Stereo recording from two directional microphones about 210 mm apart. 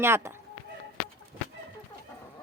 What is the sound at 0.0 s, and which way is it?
Speech, 10° right (ahead or behind).